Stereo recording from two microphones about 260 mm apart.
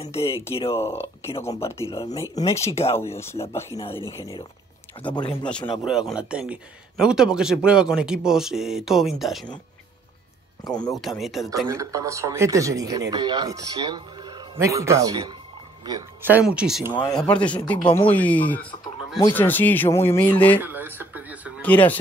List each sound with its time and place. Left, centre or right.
0.0 s speech: left
0.7 s speech: centre
2.7 s speech: left
3.0 s speech: centre
5.1 s speech: centre
5.9 s speech: centre
10.6 s speech: centre
11.0 s speech: centre
11.6 s a man's voice: centre
17.6 s speech: centre
18.1 s speech: centre
20.6 s a sound: centre
21.5 s speech: centre